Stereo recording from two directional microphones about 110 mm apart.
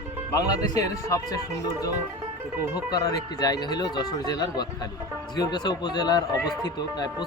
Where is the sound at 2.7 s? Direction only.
35° left (ahead or behind).